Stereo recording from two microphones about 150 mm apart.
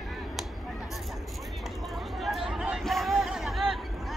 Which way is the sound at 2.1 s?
Centre (ahead or behind).